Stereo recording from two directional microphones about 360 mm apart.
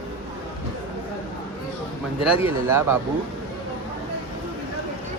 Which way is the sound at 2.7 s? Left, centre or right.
Centre.